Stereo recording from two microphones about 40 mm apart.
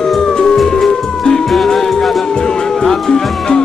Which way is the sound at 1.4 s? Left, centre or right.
Centre.